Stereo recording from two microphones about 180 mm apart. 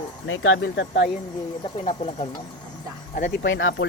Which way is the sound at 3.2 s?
90° left.